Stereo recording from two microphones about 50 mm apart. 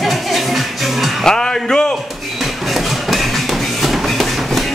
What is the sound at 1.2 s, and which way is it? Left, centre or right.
Music, centre.